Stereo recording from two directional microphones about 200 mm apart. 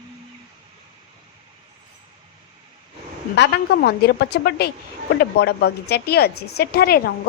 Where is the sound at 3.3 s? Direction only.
60° left (ahead or behind).